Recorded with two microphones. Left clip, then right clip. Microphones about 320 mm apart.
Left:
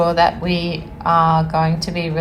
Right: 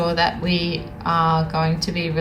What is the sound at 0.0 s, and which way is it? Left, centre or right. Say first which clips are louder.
Speech: left 5 dB; centre.